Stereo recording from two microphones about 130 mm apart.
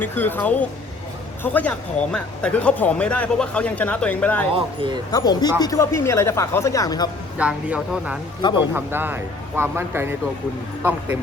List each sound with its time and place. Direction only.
0.0 s speech: 15° left (ahead or behind)
4.5 s speech: 40° right (ahead or behind)
5.1 s speech: 30° left (ahead or behind)
7.3 s speech: 10° right (ahead or behind)